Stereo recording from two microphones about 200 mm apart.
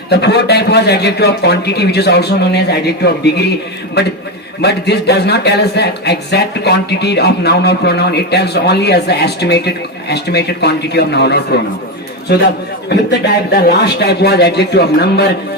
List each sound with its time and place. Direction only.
0.1 s speech: 55° left (ahead or behind)
12.9 s speech: 55° left (ahead or behind)